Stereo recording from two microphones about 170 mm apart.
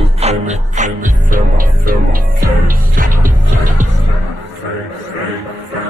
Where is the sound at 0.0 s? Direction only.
40° right (ahead or behind).